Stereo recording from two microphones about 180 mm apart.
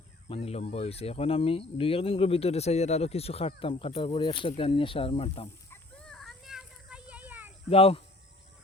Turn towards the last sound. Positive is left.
turn(degrees=35)  # may be behind; listen again after turning